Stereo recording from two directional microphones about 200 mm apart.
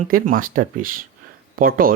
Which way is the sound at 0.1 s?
45° right (ahead or behind).